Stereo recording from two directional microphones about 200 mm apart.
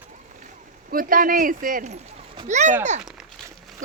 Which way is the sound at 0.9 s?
45° right (ahead or behind).